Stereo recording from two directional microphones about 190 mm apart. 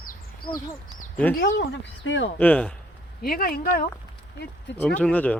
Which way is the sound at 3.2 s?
50° left (ahead or behind).